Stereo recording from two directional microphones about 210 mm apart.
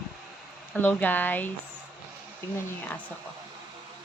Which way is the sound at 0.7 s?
10° left (ahead or behind).